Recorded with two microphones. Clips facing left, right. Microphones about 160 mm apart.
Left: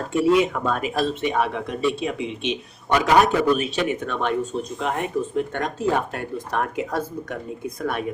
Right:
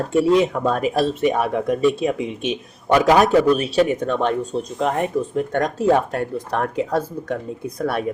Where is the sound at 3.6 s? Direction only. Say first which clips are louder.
Right 6 dB; 40° right (ahead or behind).